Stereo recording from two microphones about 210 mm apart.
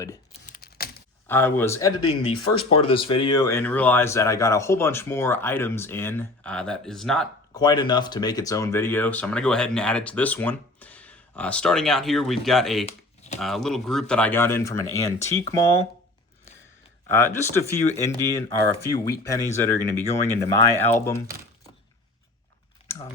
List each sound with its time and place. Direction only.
0.4 s a sound: 45° left (ahead or behind)
1.3 s speech: 10° left (ahead or behind)
2.0 s speech: 90° left
2.6 s speech: 25° left (ahead or behind); by 7.3 s centre (ahead or behind)
7.5 s speech: 20° left (ahead or behind)
17.1 s speech: 10° left (ahead or behind)